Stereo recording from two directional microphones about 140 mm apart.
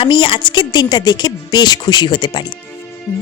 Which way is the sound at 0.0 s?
35° left (ahead or behind).